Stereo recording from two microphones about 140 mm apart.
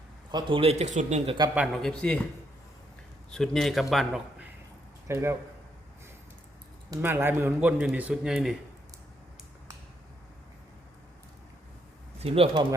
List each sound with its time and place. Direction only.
0.3 s speech: 35° right (ahead or behind); by 1.2 s 55° right (ahead or behind)
1.5 s a man's voice: centre (ahead or behind)
3.2 s a man's voice: 5° left (ahead or behind)
5.0 s speech: 20° right (ahead or behind)
7.0 s speech: 15° right (ahead or behind)
12.2 s speech: 45° right (ahead or behind)